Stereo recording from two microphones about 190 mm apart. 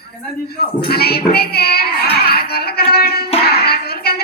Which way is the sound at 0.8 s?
55° left (ahead or behind).